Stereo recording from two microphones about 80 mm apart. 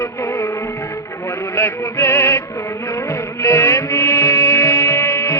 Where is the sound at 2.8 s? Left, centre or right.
Left.